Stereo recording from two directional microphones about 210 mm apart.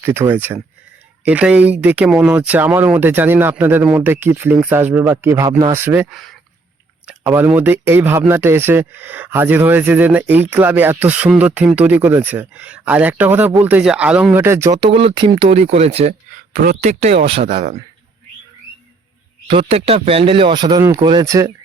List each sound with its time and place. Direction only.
0.0 s speech: 10° right (ahead or behind); by 16.1 s 30° right (ahead or behind)
16.6 s speech: 40° right (ahead or behind)
19.5 s speech: 25° right (ahead or behind)